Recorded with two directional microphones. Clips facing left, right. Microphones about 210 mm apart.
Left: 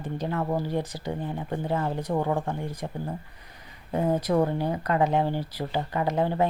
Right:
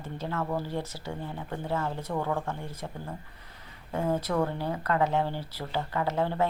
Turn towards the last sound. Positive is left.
turn(degrees=15)  # may be behind; listen again after turning